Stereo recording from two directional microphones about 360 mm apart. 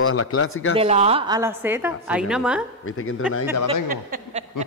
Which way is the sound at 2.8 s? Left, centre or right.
Left.